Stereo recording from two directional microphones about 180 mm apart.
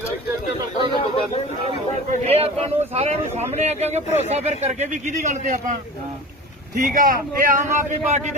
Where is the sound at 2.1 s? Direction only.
35° right (ahead or behind).